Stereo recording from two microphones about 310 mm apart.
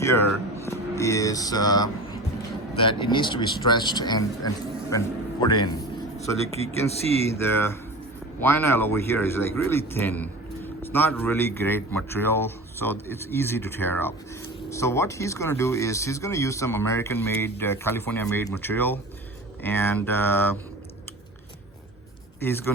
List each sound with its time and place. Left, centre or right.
0.6 s speech: centre
7.0 s speech: centre
7.3 s speech: centre
22.4 s speech: centre